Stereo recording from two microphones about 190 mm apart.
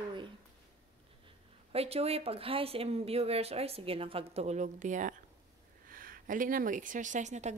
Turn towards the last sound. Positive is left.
turn(degrees=-40)  # may be behind; listen again after turning